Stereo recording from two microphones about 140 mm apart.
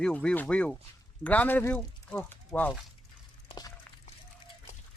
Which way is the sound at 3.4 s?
30° left (ahead or behind).